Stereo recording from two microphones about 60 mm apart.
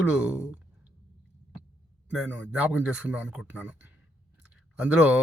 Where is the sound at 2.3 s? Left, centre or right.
Right.